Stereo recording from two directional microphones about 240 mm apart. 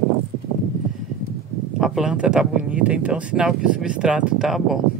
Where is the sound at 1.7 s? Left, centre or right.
Centre.